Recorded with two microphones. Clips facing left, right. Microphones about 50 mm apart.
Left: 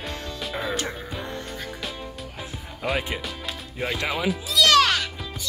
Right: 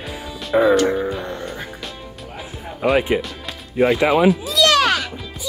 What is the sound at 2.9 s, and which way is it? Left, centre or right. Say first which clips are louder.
Speech: right 10 dB; right.